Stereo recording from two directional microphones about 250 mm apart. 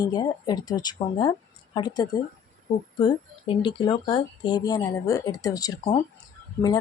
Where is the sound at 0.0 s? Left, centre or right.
Centre.